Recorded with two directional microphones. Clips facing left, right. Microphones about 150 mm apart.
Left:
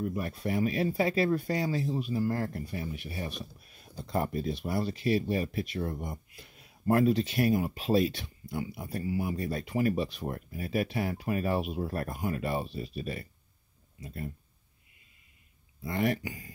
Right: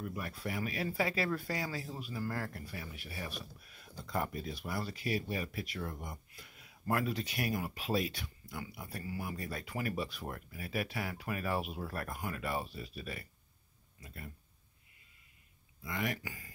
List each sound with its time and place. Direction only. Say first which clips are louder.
0.0 s speech: left 8 dB; 30° left (ahead or behind)
15.8 s speech: left 8 dB; 35° left (ahead or behind)